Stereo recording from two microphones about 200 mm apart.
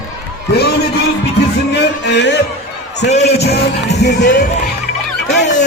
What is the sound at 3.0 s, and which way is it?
Speech, 35° left (ahead or behind).